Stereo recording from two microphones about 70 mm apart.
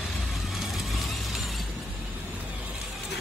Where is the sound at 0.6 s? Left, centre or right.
Centre.